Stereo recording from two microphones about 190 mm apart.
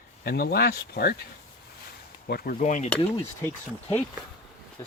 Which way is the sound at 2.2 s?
50° left (ahead or behind).